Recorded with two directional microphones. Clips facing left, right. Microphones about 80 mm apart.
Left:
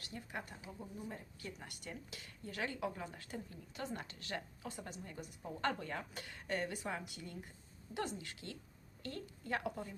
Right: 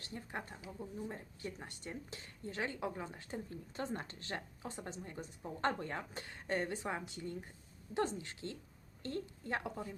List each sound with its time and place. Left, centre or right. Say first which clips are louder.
0.0 s speech: right 2 dB; right